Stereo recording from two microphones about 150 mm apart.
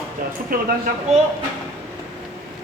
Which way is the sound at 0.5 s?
70° right (ahead or behind).